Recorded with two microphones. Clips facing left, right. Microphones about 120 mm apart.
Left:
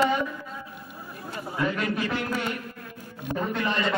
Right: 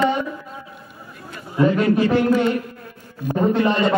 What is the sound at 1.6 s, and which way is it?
Speech, 30° right (ahead or behind).